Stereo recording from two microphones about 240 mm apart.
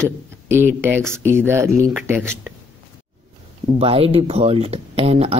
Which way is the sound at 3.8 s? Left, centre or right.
Right.